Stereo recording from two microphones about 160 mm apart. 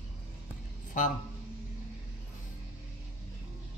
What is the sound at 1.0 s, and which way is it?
Speech, 55° left (ahead or behind).